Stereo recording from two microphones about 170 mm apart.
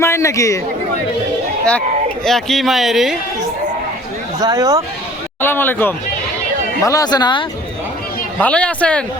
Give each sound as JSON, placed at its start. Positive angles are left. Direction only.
{"t": 0.0, "sound": "a man's voice", "side_deg": 15}
{"t": 2.2, "sound": "speech", "side_deg": 0}
{"t": 4.4, "sound": "speech", "side_deg": -20}
{"t": 5.4, "sound": "a man's voice", "side_deg": 10}
{"t": 8.4, "sound": "speech", "side_deg": 5}